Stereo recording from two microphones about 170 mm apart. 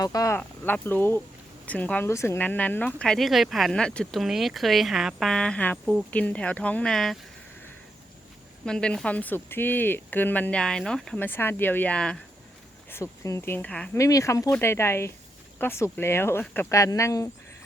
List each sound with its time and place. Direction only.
0.0 s speech: 20° left (ahead or behind); by 7.2 s centre (ahead or behind)
8.6 s speech: 5° left (ahead or behind)
12.9 s speech: 15° left (ahead or behind)
14.0 s speech: 20° left (ahead or behind)